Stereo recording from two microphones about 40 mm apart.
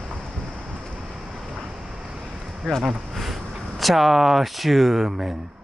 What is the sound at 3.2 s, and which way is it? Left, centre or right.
A man's voice, centre.